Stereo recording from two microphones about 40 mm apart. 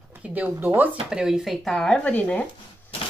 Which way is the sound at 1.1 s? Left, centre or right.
Centre.